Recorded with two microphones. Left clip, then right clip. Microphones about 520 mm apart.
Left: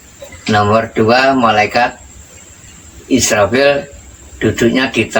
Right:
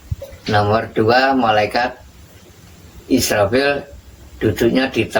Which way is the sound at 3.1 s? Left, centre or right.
Right.